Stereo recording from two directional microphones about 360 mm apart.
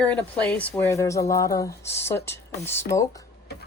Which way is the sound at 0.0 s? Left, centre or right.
Centre.